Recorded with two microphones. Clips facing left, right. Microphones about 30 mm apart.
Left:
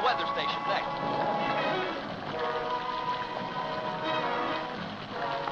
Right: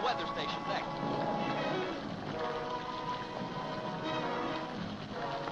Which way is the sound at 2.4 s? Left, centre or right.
Left.